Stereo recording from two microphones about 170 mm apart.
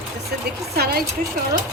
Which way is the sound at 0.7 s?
65° right (ahead or behind).